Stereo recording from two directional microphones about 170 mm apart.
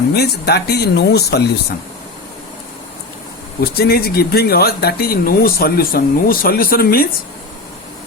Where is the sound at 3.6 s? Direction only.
65° left (ahead or behind).